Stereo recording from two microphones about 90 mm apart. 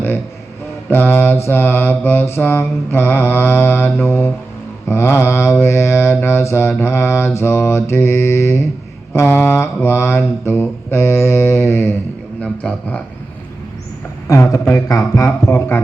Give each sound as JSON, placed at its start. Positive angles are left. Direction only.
{"t": 0.9, "sound": "mantra", "side_deg": 20}
{"t": 12.4, "sound": "a man's voice", "side_deg": 15}
{"t": 14.3, "sound": "speech", "side_deg": 35}
{"t": 15.4, "sound": "mantra", "side_deg": 25}